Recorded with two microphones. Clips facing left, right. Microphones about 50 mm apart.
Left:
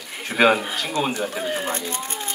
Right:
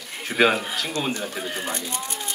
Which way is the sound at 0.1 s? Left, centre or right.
Centre.